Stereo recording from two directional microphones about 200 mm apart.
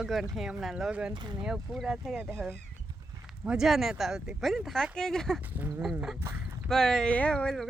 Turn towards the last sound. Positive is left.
turn(degrees=5)  # may be behind; listen again after turning